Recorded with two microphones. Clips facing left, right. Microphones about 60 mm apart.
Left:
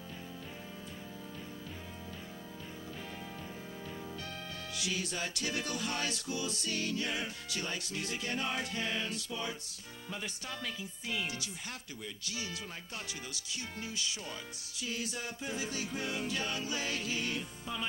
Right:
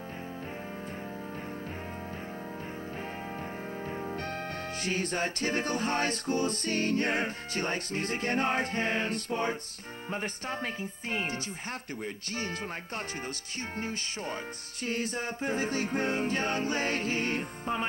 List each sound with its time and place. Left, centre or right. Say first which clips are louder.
3.8 s music: right 8 dB; right